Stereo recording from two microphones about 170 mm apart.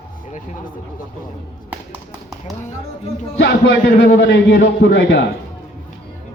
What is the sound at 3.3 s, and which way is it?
A man's voice, 90° left.